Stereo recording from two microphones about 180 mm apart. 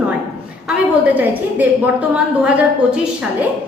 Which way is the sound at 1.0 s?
10° right (ahead or behind).